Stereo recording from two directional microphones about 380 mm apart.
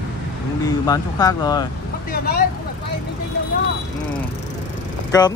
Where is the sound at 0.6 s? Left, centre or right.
Centre.